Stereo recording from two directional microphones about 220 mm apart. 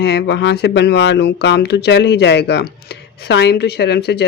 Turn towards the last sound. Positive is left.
turn(degrees=50)  # may be behind; listen again after turning